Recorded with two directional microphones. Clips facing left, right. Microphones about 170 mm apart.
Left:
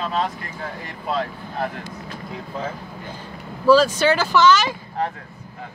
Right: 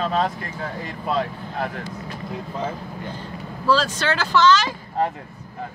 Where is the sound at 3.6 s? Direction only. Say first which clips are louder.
Left 6 dB; 5° left (ahead or behind).